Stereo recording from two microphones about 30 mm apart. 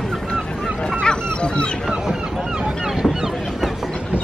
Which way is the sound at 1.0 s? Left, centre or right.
Left.